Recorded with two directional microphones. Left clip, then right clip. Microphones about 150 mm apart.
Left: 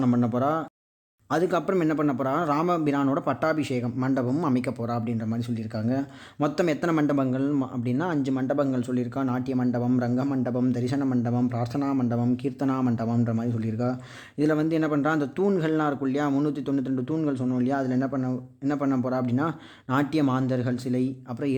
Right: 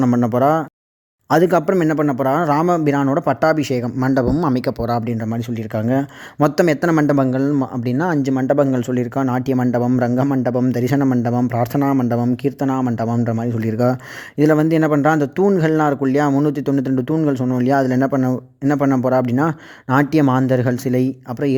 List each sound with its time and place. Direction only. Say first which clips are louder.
0.0 s a man's voice: right 9 dB; 40° right (ahead or behind)
1.7 s a man's voice: right 7 dB; 35° right (ahead or behind)
13.6 s speech: right 11 dB; 60° right (ahead or behind)
14.3 s a man's voice: right 9 dB; 50° right (ahead or behind)